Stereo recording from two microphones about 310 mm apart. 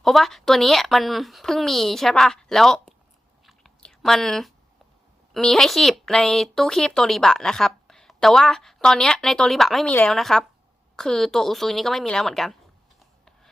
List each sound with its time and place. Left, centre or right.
0.0 s speech: centre
3.4 s chewing: centre
5.3 s speech: centre